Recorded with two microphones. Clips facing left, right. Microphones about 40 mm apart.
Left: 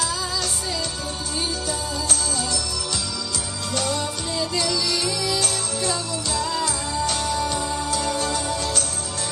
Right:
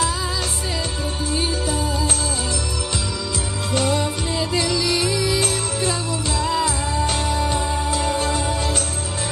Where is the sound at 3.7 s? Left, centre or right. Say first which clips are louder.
Right 5 dB; right.